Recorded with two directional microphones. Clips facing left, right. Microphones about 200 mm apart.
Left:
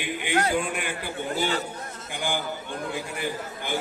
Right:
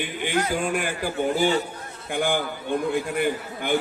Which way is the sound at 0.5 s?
45° right (ahead or behind).